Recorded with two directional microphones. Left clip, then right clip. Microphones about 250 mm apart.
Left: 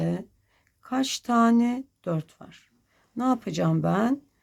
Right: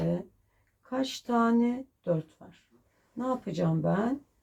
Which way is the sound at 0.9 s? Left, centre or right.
Left.